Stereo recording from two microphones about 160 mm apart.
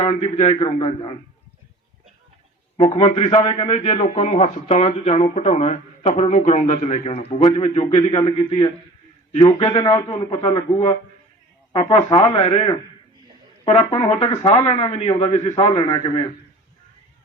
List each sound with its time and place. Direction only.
0.0 s speech: 40° left (ahead or behind)
2.7 s speech: 30° left (ahead or behind)
9.8 s a man's voice: 20° left (ahead or behind)